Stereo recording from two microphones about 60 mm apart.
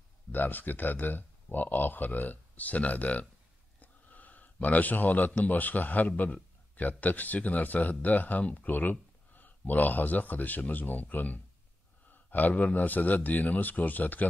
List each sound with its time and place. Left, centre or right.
0.3 s speech: left